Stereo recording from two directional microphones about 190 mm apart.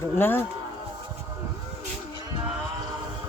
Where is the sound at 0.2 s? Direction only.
10° left (ahead or behind).